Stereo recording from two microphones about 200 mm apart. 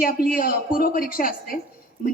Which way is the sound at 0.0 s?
45° left (ahead or behind).